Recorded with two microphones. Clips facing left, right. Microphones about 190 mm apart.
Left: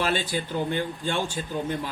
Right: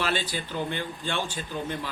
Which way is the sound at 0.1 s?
50° left (ahead or behind).